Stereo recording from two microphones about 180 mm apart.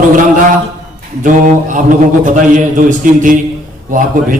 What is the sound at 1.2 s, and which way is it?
A man's voice, 45° right (ahead or behind).